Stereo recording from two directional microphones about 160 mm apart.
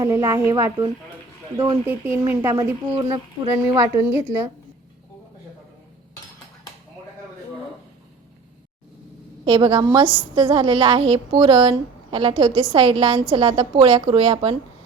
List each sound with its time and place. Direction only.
0.0 s a woman's voice: 20° right (ahead or behind)
1.9 s speech: 10° right (ahead or behind)
2.5 s a woman's voice: 25° right (ahead or behind)
9.5 s a woman's voice: 30° right (ahead or behind)